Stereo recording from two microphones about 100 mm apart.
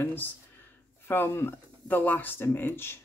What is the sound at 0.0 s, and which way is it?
Speech, 20° left (ahead or behind).